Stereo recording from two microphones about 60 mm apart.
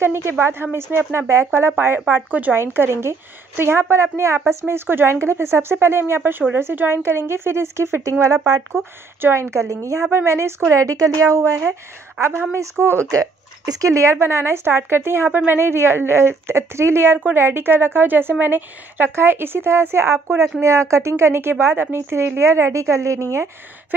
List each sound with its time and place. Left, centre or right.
0.0 s a woman's voice: right
8.2 s a woman's voice: right
8.7 s a woman's voice: right
10.1 s a woman's voice: right
12.2 s a woman's voice: right
13.0 s speech: right
14.3 s a woman's voice: right